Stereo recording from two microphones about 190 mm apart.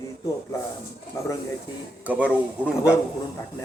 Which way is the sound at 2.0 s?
10° right (ahead or behind).